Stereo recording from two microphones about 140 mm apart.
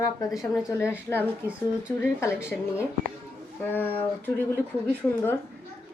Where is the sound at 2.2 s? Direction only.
20° left (ahead or behind).